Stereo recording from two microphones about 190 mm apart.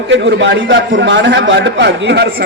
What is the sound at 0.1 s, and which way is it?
A man's voice, 70° right (ahead or behind).